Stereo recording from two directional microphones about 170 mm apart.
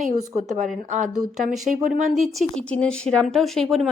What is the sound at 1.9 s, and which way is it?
A woman's voice, centre (ahead or behind).